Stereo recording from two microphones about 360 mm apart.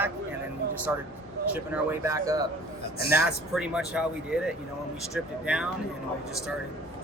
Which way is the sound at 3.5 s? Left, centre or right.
Centre.